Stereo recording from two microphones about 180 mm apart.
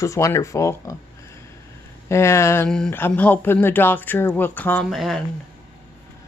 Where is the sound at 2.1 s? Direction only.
15° left (ahead or behind).